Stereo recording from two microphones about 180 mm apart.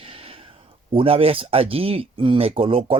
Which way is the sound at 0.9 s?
30° right (ahead or behind).